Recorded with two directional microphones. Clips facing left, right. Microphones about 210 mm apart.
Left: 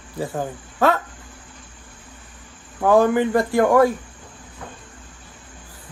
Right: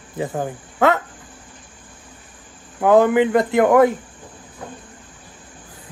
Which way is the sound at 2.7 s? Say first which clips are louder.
Right 2 dB; 20° right (ahead or behind).